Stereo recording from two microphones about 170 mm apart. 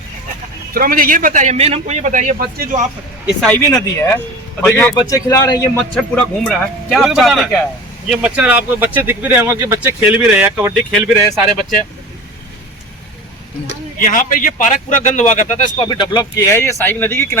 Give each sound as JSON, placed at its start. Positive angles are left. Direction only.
{"t": 0.7, "sound": "a man's voice", "side_deg": -60}
{"t": 3.4, "sound": "speech", "side_deg": 10}
{"t": 3.7, "sound": "a man's voice", "side_deg": 20}
{"t": 4.7, "sound": "a man's voice", "side_deg": 10}
{"t": 14.0, "sound": "a man's voice", "side_deg": 50}
{"t": 15.9, "sound": "speech", "side_deg": 25}